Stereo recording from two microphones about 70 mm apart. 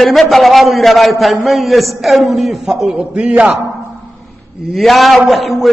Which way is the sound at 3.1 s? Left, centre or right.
Centre.